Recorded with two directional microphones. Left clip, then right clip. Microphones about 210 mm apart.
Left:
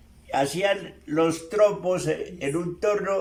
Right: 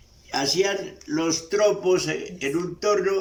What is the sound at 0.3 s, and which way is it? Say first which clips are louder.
A man's voice: even; 15° left (ahead or behind).